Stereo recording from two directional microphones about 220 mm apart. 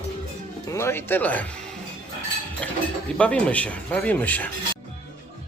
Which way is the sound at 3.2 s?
5° left (ahead or behind).